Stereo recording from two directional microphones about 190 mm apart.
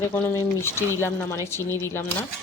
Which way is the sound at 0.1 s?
10° left (ahead or behind).